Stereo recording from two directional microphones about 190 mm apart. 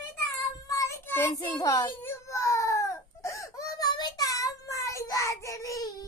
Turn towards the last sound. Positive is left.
turn(degrees=15)  # may be behind; listen again after turning